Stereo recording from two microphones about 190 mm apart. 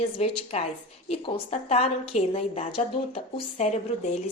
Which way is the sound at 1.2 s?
30° left (ahead or behind).